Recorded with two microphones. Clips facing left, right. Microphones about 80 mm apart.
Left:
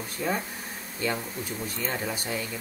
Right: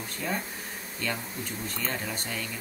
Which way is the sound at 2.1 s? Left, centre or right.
Centre.